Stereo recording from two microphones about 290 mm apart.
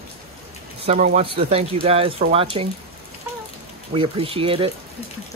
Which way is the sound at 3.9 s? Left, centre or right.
Centre.